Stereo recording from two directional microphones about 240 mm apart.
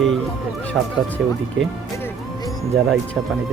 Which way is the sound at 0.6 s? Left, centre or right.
Centre.